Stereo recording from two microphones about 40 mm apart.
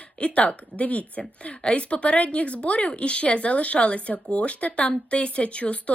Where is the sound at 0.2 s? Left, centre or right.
Left.